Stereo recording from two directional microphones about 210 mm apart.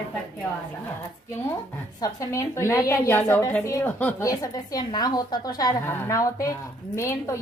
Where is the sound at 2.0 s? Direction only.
15° left (ahead or behind).